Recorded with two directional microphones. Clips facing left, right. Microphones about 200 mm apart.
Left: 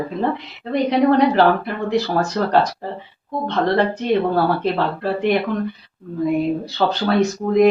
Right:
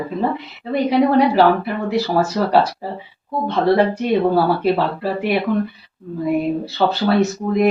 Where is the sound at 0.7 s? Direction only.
5° right (ahead or behind).